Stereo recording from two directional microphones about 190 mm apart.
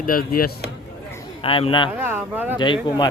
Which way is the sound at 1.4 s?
30° left (ahead or behind).